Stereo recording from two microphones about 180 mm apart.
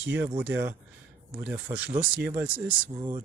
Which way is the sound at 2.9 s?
25° right (ahead or behind).